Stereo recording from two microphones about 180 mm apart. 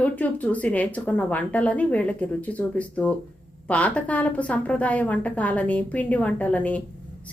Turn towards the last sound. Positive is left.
turn(degrees=10)  # may be behind; listen again after turning